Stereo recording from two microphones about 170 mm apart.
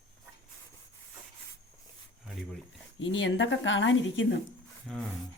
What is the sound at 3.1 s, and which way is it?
Speech, 90° left.